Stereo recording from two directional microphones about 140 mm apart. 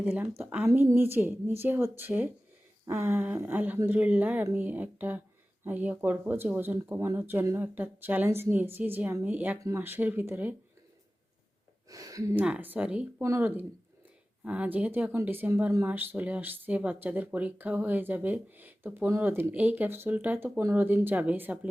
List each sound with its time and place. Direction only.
0.0 s a woman's voice: 10° right (ahead or behind)
11.9 s speech: 25° right (ahead or behind)
12.3 s speech: 10° right (ahead or behind)